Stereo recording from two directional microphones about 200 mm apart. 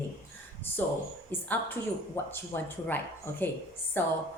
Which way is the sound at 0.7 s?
10° left (ahead or behind).